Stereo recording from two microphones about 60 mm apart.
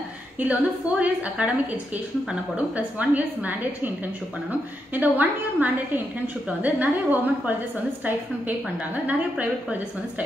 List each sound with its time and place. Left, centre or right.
0.4 s a woman's voice: right